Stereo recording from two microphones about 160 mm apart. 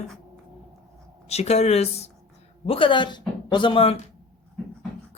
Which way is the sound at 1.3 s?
40° left (ahead or behind).